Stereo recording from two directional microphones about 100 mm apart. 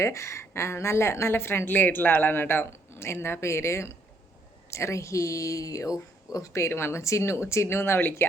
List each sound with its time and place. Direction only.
0.0 s a woman's voice: 30° left (ahead or behind)